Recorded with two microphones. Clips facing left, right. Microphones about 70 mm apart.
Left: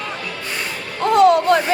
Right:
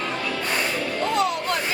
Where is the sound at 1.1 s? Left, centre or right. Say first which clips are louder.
Left 13 dB; left.